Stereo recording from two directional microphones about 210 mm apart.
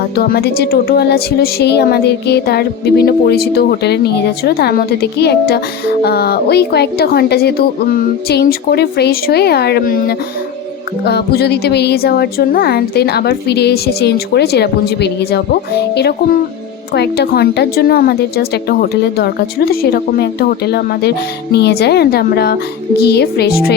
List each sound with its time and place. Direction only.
0.2 s speech: 50° left (ahead or behind)